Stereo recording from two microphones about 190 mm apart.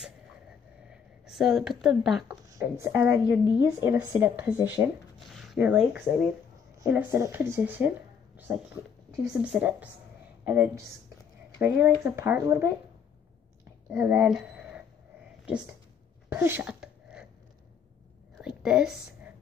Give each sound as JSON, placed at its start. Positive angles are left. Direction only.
{"t": 0.8, "sound": "speech", "side_deg": 0}
{"t": 2.5, "sound": "a woman's voice", "side_deg": -15}
{"t": 13.9, "sound": "speech", "side_deg": -10}
{"t": 16.3, "sound": "sneeze", "side_deg": -10}
{"t": 18.6, "sound": "a woman's voice", "side_deg": -5}